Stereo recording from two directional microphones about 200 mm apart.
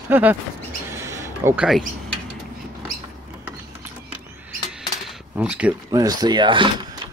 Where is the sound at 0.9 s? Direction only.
15° right (ahead or behind).